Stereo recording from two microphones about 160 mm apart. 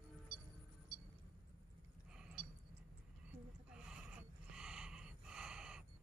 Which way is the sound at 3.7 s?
5° right (ahead or behind).